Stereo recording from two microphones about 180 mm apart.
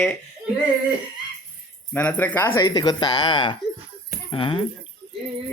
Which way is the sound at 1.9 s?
10° left (ahead or behind).